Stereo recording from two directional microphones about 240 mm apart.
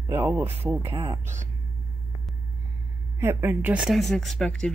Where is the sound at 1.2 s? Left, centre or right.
Right.